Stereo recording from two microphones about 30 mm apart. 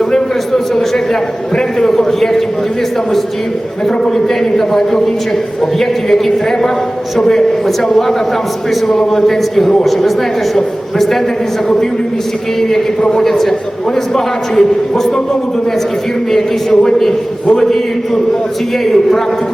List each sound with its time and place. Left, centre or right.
0.1 s a sound: centre
1.9 s a man's voice: centre
4.5 s a man's voice: centre
6.1 s a man's voice: centre
7.2 s a man's voice: centre
8.9 s a man's voice: centre
13.2 s a man's voice: centre
14.5 s a man's voice: centre
16.3 s a man's voice: centre